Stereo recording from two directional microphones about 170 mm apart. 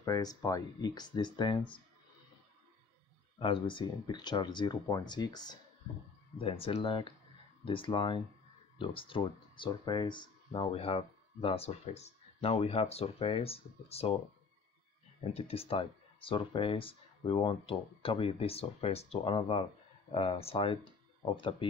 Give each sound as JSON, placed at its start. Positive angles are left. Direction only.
{"t": 0.0, "sound": "speech", "side_deg": 20}
{"t": 3.3, "sound": "speech", "side_deg": 30}
{"t": 6.6, "sound": "speech", "side_deg": 30}
{"t": 15.2, "sound": "speech", "side_deg": 35}